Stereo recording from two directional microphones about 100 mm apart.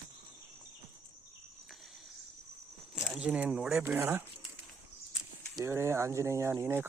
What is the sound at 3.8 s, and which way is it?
Speech, 25° right (ahead or behind).